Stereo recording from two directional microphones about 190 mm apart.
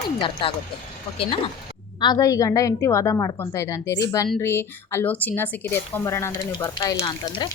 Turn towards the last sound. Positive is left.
turn(degrees=20)  # may be behind; listen again after turning